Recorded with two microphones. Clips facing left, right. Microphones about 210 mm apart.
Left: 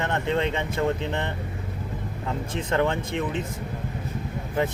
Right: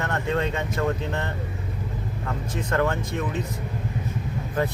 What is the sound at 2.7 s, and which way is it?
Speech, 20° left (ahead or behind).